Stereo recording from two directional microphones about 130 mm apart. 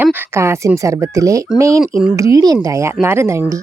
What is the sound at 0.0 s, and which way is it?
Speech, 20° right (ahead or behind).